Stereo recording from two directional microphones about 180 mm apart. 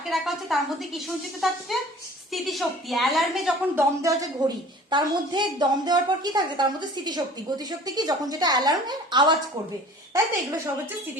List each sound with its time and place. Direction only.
0.1 s a woman's voice: centre (ahead or behind)
4.0 s a woman's voice: 25° right (ahead or behind)